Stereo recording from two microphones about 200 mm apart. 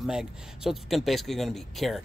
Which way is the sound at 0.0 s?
5° right (ahead or behind).